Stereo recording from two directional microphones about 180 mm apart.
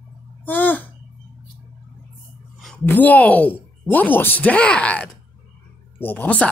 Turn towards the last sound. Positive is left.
turn(degrees=10)  # may be behind; listen again after turning